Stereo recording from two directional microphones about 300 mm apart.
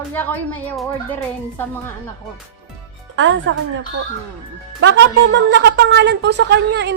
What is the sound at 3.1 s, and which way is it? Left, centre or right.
Speech, right.